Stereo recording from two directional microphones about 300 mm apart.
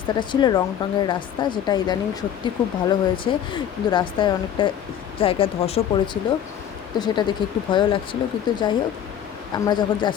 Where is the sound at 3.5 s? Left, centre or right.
Centre.